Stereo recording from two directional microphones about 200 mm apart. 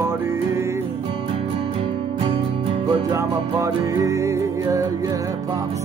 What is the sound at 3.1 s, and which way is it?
Music, 15° right (ahead or behind).